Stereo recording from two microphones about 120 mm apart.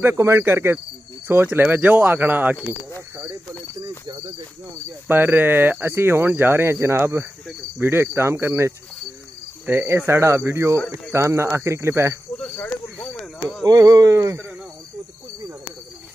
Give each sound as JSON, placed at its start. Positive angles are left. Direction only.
{"t": 0.0, "sound": "speech", "side_deg": -25}
{"t": 5.0, "sound": "speech", "side_deg": -15}
{"t": 12.4, "sound": "cricket", "side_deg": 5}
{"t": 13.0, "sound": "a sound", "side_deg": 5}
{"t": 13.7, "sound": "speech", "side_deg": -30}